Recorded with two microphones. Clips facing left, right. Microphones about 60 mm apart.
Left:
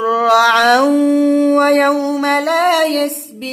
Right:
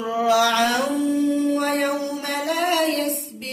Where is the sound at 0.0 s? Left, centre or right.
Left.